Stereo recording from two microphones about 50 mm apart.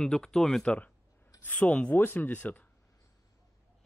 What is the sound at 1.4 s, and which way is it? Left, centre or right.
Speech, left.